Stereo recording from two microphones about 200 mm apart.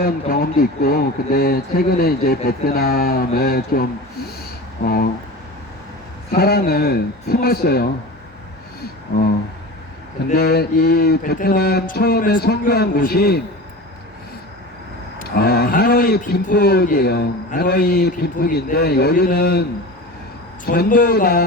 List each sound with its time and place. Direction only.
0.0 s a man's voice: 45° left (ahead or behind)
6.3 s a man's voice: 50° left (ahead or behind)
10.3 s a man's voice: 50° left (ahead or behind)
15.4 s a man's voice: 50° left (ahead or behind)
20.7 s a man's voice: 45° left (ahead or behind)